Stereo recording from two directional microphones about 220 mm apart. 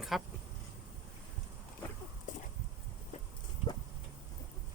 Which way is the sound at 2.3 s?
35° left (ahead or behind).